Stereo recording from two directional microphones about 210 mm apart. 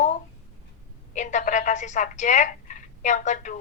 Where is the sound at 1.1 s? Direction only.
35° left (ahead or behind).